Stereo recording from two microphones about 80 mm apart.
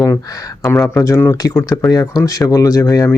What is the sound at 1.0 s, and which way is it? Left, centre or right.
Speech, left.